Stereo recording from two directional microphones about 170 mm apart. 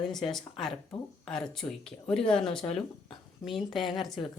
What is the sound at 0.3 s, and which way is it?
Speech, centre (ahead or behind).